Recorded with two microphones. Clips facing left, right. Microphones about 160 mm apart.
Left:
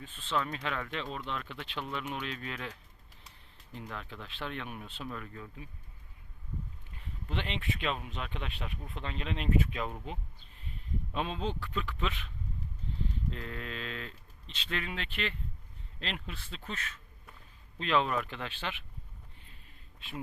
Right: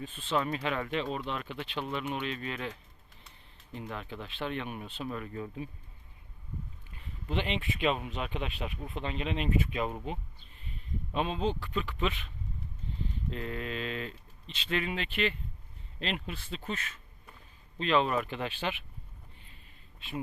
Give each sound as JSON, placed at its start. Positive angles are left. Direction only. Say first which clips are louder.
{"t": 0.0, "sound": "speech", "louder": "right 3 dB", "side_deg": -10}
{"t": 5.3, "sound": "speech", "louder": "right 8 dB", "side_deg": -25}
{"t": 7.3, "sound": "speech", "louder": "right 4 dB", "side_deg": -5}
{"t": 11.1, "sound": "speech", "louder": "right 4 dB", "side_deg": -5}
{"t": 13.3, "sound": "speech", "louder": "right 4 dB", "side_deg": -5}